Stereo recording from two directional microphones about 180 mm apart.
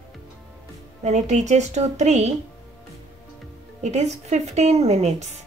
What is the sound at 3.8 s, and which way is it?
A woman's voice, 40° right (ahead or behind).